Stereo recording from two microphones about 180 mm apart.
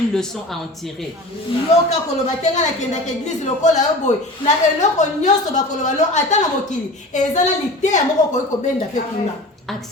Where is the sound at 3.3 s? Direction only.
40° left (ahead or behind).